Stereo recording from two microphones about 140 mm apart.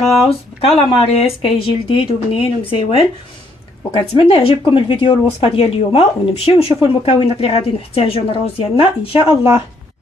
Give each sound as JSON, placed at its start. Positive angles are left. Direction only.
{"t": 0.3, "sound": "speech", "side_deg": 45}